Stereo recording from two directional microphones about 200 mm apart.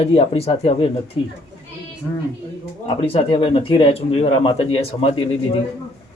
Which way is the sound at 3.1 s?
25° left (ahead or behind).